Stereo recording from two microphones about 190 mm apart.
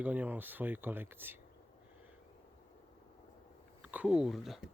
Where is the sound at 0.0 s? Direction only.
10° right (ahead or behind).